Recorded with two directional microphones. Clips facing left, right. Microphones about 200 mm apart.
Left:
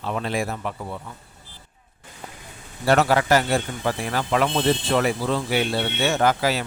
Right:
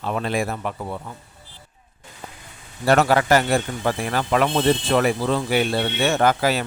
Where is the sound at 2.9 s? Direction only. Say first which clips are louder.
Right 1 dB; 50° right (ahead or behind).